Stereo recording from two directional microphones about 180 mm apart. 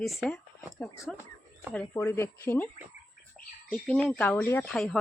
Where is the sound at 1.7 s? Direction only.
10° left (ahead or behind).